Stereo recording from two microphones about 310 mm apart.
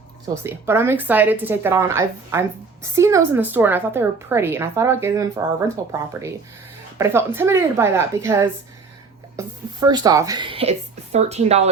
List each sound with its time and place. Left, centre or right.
0.4 s a woman's voice: centre